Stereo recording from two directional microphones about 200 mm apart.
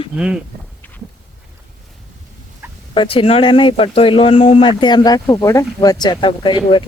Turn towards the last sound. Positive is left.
turn(degrees=25)  # may be behind; listen again after turning